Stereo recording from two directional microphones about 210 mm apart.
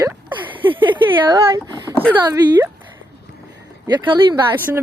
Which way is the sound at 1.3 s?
20° right (ahead or behind).